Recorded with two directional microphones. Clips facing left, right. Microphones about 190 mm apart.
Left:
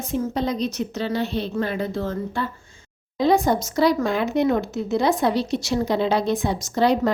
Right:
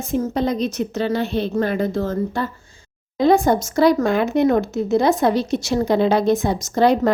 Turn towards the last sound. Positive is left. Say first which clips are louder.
# right 3 dB
turn(degrees=-50)  # may be behind; listen again after turning